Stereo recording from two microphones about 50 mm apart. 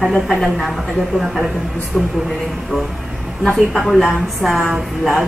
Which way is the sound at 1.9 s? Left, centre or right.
Left.